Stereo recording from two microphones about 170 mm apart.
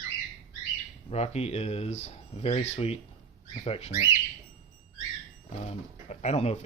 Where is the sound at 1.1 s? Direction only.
40° left (ahead or behind).